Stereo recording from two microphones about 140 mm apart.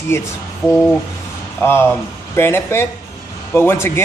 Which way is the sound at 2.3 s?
15° left (ahead or behind).